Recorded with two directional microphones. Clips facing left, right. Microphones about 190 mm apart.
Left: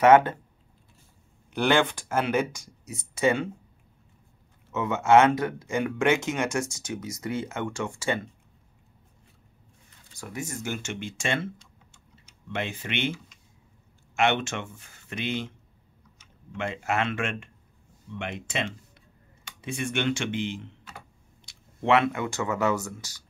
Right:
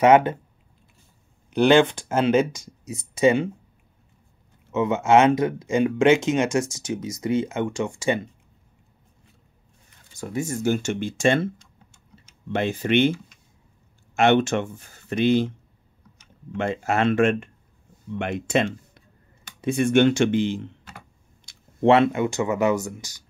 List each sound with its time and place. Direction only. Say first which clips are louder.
0.0 s speech: right 2 dB; 15° right (ahead or behind)
1.5 s speech: right 7 dB; 20° right (ahead or behind)
4.7 s speech: right 2 dB; 20° right (ahead or behind)
10.1 s speech: right 8 dB; 30° right (ahead or behind)
16.5 s speech: right 5 dB; 40° right (ahead or behind)
21.8 s speech: right 6 dB; 30° right (ahead or behind)